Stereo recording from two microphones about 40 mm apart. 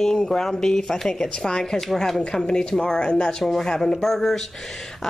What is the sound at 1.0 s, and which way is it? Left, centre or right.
Speech, left.